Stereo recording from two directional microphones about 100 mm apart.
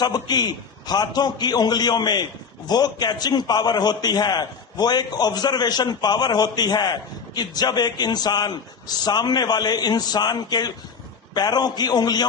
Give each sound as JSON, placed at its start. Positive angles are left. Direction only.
{"t": 0.0, "sound": "a man's voice", "side_deg": 45}